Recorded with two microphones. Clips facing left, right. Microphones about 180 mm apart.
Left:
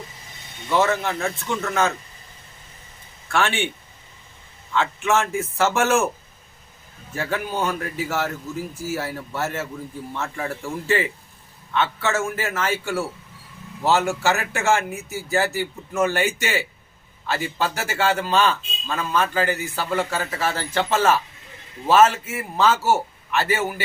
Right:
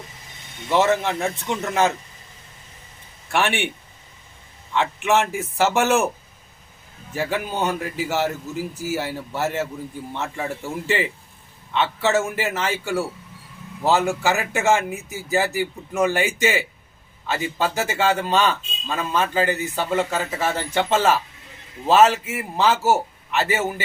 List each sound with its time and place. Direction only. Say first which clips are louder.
0.7 s a man's voice: right 2 dB; 20° right (ahead or behind)
3.3 s a man's voice: even; 20° right (ahead or behind)
4.7 s a man's voice: right 1 dB; 20° right (ahead or behind)
7.2 s a man's voice: right 1 dB; 20° right (ahead or behind)